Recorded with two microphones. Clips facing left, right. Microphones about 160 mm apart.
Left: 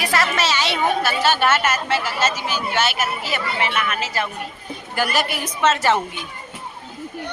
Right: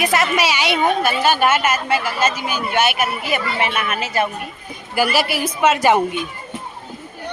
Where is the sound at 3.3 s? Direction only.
20° right (ahead or behind).